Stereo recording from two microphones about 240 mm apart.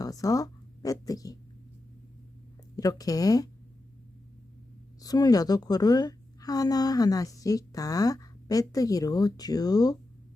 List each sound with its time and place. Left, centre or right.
0.0 s speech: centre
2.7 s a woman's voice: centre
4.9 s a woman's voice: centre